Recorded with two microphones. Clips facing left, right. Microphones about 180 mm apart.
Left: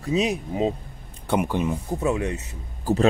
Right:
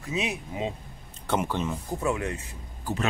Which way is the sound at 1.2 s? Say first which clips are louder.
Left 4 dB; 15° left (ahead or behind).